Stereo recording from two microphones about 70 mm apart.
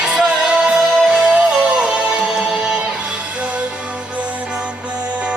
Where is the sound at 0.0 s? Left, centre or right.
Centre.